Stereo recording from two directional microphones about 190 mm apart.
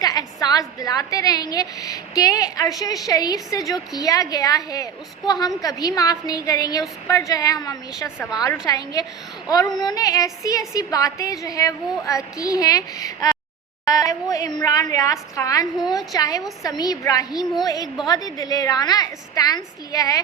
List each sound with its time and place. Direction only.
0.0 s a woman's voice: 20° left (ahead or behind)